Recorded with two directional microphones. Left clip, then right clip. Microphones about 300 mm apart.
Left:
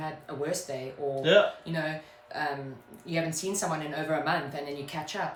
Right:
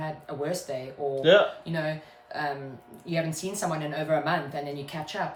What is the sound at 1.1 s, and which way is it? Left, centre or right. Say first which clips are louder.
Speech: right 3 dB; centre.